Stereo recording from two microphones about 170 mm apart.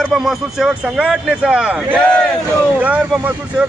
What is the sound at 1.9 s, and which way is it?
Speech, 5° left (ahead or behind).